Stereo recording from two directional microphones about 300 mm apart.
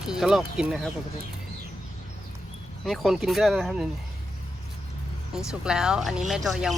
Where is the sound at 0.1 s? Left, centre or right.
Centre.